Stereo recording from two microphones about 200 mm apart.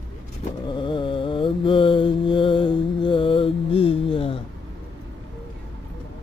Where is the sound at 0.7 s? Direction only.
25° left (ahead or behind).